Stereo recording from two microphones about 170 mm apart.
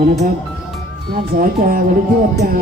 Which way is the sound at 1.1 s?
60° right (ahead or behind).